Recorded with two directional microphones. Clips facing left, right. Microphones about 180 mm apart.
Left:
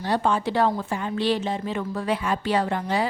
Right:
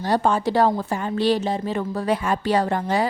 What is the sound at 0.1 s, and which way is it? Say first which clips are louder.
A woman's voice: right 3 dB; 40° right (ahead or behind).